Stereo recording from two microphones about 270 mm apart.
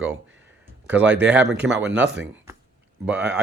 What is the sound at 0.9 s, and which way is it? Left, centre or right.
Speech, centre.